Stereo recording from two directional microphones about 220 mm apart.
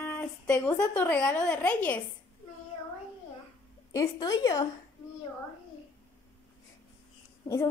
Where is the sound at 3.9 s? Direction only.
15° left (ahead or behind).